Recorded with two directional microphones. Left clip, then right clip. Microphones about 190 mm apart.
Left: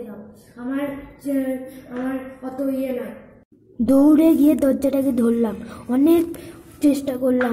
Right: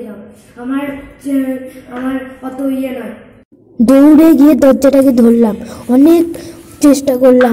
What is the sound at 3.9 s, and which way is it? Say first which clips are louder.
A woman's voice: right 9 dB; 20° right (ahead or behind).